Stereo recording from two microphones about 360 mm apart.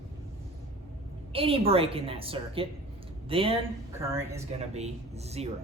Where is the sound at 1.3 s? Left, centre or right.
Centre.